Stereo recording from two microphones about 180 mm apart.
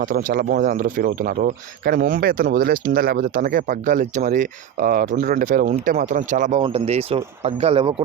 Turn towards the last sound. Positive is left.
turn(degrees=-30)  # may be behind; listen again after turning